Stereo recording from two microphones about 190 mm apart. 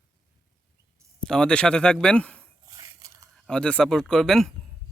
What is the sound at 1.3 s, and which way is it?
Speech, 5° left (ahead or behind).